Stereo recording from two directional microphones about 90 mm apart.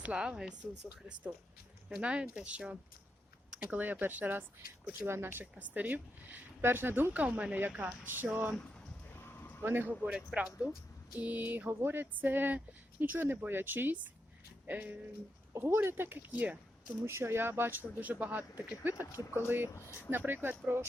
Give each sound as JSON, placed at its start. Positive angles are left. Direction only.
{"t": 0.0, "sound": "speech", "side_deg": -10}
{"t": 2.0, "sound": "a woman's voice", "side_deg": -10}
{"t": 9.0, "sound": "horse", "side_deg": 25}
{"t": 9.6, "sound": "speech", "side_deg": -25}
{"t": 10.0, "sound": "a woman's voice", "side_deg": -10}
{"t": 17.1, "sound": "a woman's voice", "side_deg": -30}
{"t": 19.7, "sound": "speech", "side_deg": 30}
{"t": 20.1, "sound": "a woman's voice", "side_deg": -25}